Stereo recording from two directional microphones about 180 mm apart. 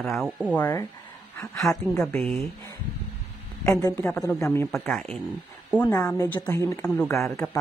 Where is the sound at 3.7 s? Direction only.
20° left (ahead or behind).